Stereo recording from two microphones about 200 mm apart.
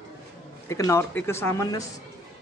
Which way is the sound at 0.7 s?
15° left (ahead or behind).